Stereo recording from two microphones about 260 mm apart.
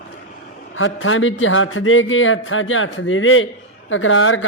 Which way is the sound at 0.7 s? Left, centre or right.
Left.